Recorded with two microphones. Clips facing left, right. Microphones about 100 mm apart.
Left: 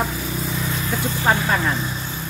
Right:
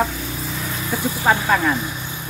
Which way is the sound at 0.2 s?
Centre (ahead or behind).